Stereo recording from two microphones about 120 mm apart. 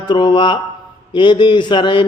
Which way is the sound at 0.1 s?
40° left (ahead or behind).